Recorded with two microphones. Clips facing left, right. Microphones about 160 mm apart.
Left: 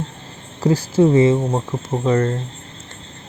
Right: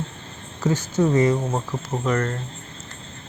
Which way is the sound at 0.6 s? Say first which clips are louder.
Left 6 dB; 35° left (ahead or behind).